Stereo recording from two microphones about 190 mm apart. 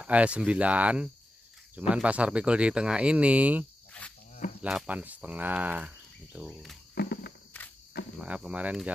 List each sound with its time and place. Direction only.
0.0 s speech: 5° right (ahead or behind)
7.0 s walk: 55° left (ahead or behind)
7.5 s cricket: 10° left (ahead or behind)
8.2 s speech: 5° right (ahead or behind)